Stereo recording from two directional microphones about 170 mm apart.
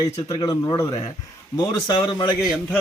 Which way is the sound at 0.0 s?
25° left (ahead or behind).